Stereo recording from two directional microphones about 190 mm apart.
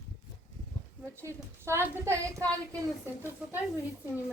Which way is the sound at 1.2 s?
15° right (ahead or behind).